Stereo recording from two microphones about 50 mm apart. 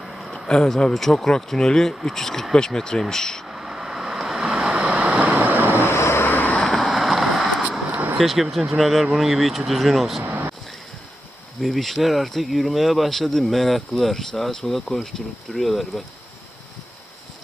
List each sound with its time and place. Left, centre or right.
0.0 s a sound: centre
0.4 s speech: centre
3.4 s vehicle: centre
4.7 s vehicle: right
5.4 s vehicle: right
5.7 s vehicle: left
6.2 s vehicle: left
6.5 s vehicle: left
6.8 s vehicle: centre
7.9 s a sound: right
8.2 s speech: centre
10.2 s a sound: right
11.6 s speech: centre